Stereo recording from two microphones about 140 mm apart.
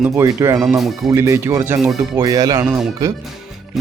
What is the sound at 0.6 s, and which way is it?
Speech, 5° right (ahead or behind).